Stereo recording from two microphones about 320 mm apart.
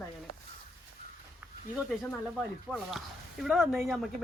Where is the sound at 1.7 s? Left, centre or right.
Centre.